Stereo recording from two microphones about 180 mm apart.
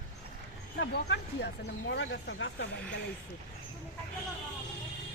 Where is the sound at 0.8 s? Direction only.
75° left (ahead or behind).